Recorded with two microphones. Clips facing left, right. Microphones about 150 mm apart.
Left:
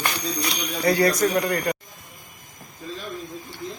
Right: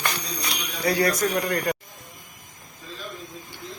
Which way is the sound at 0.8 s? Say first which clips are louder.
Left 3 dB; centre (ahead or behind).